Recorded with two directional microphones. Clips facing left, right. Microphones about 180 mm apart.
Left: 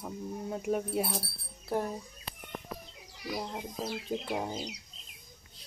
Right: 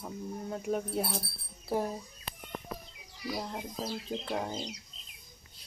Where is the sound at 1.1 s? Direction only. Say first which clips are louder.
Left 1 dB; 5° right (ahead or behind).